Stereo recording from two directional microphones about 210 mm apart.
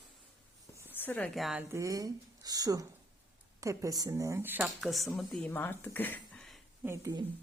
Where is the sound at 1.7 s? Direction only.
15° right (ahead or behind); by 6.6 s 5° left (ahead or behind).